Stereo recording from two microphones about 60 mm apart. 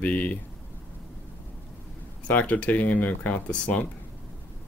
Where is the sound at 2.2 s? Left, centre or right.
Left.